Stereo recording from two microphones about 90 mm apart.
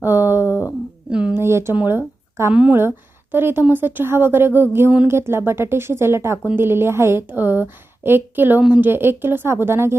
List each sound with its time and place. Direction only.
0.0 s a sound: 25° right (ahead or behind)
1.3 s a woman's voice: 30° right (ahead or behind); by 2.7 s 10° right (ahead or behind)
3.3 s a woman's voice: 25° right (ahead or behind)